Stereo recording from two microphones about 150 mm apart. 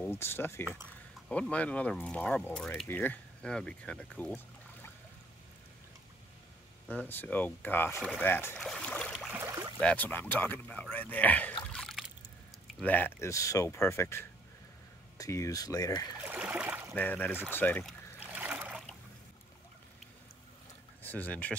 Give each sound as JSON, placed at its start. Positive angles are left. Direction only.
{"t": 0.0, "sound": "speech", "side_deg": 15}
{"t": 6.9, "sound": "speech", "side_deg": 10}
{"t": 8.5, "sound": "boat", "side_deg": 5}
{"t": 9.3, "sound": "a sound", "side_deg": -15}
{"t": 9.8, "sound": "speech", "side_deg": 10}
{"t": 11.6, "sound": "trickle", "side_deg": 5}
{"t": 12.8, "sound": "speech", "side_deg": 10}
{"t": 16.2, "sound": "a sound", "side_deg": -10}
{"t": 16.9, "sound": "speech", "side_deg": 10}
{"t": 18.2, "sound": "a sound", "side_deg": -10}
{"t": 21.0, "sound": "speech", "side_deg": 10}